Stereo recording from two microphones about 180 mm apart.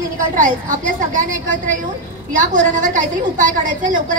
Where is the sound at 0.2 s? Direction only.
45° right (ahead or behind).